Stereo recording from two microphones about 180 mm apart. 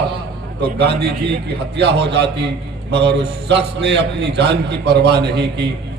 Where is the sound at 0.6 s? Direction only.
65° right (ahead or behind).